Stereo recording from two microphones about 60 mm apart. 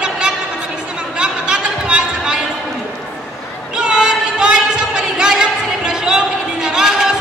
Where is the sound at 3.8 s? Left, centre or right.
Centre.